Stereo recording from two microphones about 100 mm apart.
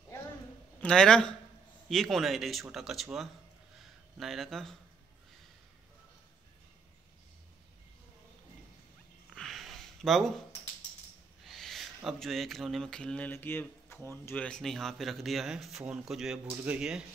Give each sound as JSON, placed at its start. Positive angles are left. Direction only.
{"t": 0.7, "sound": "a man's voice", "side_deg": 10}
{"t": 9.3, "sound": "a sound", "side_deg": 5}
{"t": 11.4, "sound": "speech", "side_deg": 5}
{"t": 14.2, "sound": "speech", "side_deg": 15}